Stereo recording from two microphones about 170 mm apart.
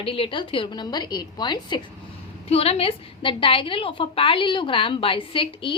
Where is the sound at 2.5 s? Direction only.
35° left (ahead or behind).